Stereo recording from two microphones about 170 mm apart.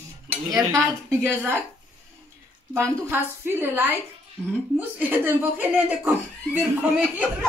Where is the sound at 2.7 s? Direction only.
15° right (ahead or behind).